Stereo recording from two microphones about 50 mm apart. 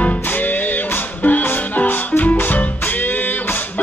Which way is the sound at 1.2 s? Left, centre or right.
Left.